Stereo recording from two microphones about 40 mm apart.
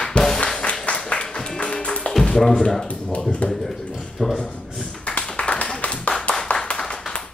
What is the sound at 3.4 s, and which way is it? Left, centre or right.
Speech, left.